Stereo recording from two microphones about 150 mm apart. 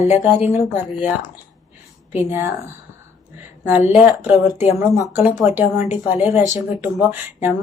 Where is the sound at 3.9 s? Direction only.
10° right (ahead or behind).